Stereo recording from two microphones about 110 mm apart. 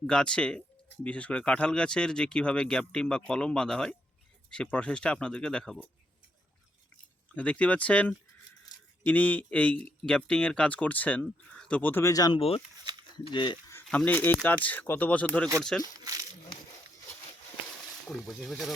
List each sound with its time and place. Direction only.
0.1 s speech: 10° left (ahead or behind)
7.3 s speech: 10° left (ahead or behind)
12.0 s speech: 35° left (ahead or behind)
12.4 s speech: 60° left (ahead or behind)
12.8 s a sound: 40° right (ahead or behind)
13.3 s speech: 50° left (ahead or behind)
13.9 s speech: 15° left (ahead or behind)
18.0 s speech: centre (ahead or behind)